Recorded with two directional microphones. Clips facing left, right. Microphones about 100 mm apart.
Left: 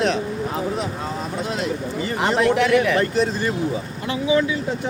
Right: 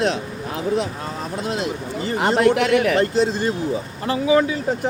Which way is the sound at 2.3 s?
55° right (ahead or behind).